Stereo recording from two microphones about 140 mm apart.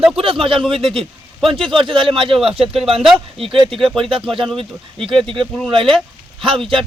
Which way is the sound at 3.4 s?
40° right (ahead or behind).